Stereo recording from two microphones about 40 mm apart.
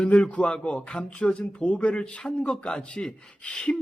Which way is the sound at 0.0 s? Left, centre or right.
Left.